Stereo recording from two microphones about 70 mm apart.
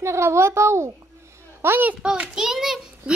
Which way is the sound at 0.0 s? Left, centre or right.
Right.